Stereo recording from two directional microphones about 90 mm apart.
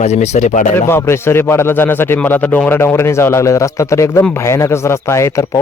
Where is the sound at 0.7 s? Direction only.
25° left (ahead or behind).